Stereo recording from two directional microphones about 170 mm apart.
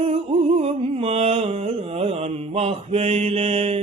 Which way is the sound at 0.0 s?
35° right (ahead or behind).